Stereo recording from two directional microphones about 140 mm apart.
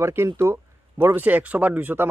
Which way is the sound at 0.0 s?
20° right (ahead or behind).